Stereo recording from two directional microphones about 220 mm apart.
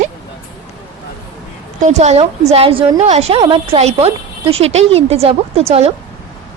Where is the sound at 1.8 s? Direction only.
30° right (ahead or behind).